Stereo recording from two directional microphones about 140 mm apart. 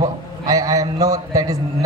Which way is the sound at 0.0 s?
25° right (ahead or behind).